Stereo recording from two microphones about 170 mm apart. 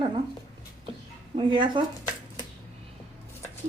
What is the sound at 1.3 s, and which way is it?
Speech, 30° right (ahead or behind).